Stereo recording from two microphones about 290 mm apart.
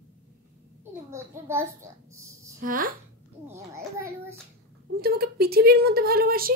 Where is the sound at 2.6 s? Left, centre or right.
Right.